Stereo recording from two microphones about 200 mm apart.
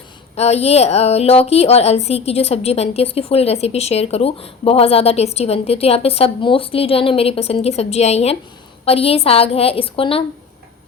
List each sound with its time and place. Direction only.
0.3 s a woman's voice: 30° left (ahead or behind)